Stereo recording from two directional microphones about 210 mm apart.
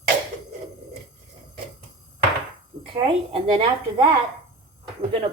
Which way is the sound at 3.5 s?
25° right (ahead or behind).